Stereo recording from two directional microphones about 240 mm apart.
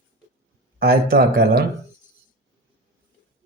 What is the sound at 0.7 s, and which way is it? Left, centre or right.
Speech, right.